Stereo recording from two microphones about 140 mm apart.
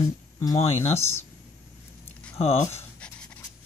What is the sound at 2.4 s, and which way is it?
Speech, 45° left (ahead or behind).